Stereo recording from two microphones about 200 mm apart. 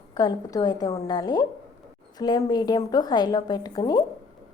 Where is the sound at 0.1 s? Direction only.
20° left (ahead or behind).